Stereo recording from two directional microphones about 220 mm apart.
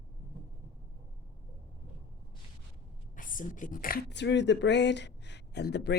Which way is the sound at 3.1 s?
35° left (ahead or behind).